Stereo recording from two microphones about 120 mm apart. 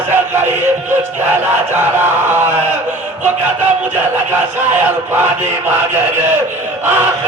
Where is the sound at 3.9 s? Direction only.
15° right (ahead or behind).